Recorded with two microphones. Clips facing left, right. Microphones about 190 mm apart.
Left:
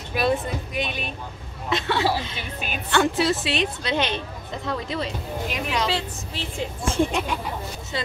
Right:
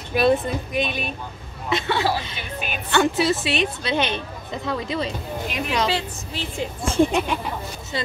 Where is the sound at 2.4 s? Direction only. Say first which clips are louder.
Right 2 dB; 35° left (ahead or behind).